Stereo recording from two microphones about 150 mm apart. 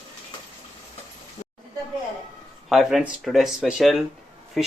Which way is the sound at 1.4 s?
55° left (ahead or behind).